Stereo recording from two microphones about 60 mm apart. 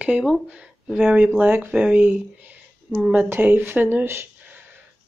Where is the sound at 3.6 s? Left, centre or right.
Right.